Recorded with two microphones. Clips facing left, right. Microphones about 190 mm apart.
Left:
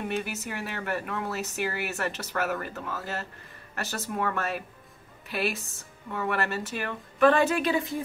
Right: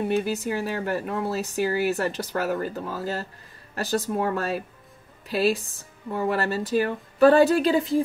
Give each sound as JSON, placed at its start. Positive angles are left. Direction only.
{"t": 0.1, "sound": "speech", "side_deg": -30}